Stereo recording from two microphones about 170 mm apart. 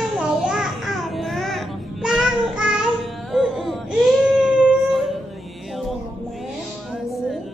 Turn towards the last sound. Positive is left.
turn(degrees=0)  # may be behind; listen again after turning